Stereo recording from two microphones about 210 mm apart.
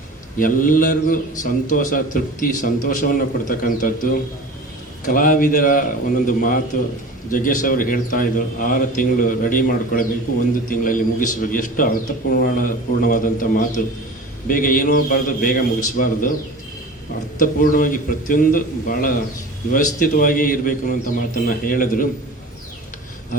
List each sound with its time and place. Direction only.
0.3 s a man's voice: 40° left (ahead or behind)
17.4 s a man's voice: 40° left (ahead or behind)